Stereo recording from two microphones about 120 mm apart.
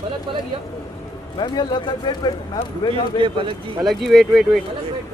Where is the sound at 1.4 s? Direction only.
35° left (ahead or behind).